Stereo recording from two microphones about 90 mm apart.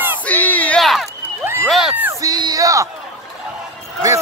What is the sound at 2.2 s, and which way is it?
Speech, 45° right (ahead or behind).